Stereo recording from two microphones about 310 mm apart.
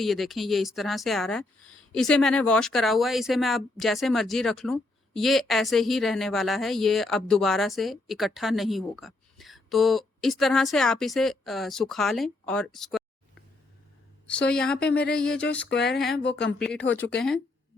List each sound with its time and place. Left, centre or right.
0.0 s speech: centre
14.3 s speech: centre
15.7 s speech: left
16.0 s speech: centre
16.2 s speech: left
16.6 s speech: centre